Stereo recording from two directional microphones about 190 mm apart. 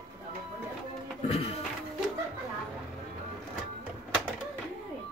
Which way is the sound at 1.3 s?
35° left (ahead or behind).